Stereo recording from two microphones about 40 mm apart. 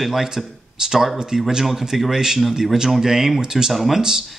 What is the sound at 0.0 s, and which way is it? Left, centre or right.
Speech, centre.